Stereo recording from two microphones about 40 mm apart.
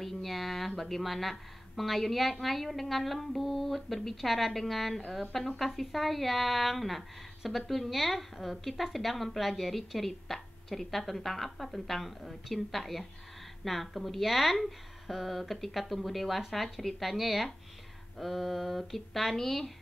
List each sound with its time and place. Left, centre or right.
0.0 s a woman's voice: centre